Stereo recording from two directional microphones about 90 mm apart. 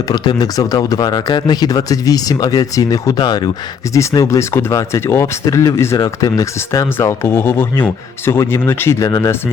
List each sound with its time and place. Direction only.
0.1 s speech: 50° left (ahead or behind)
3.2 s speech: 55° left (ahead or behind)
4.1 s speech: 40° left (ahead or behind)
9.0 s speech: 40° left (ahead or behind)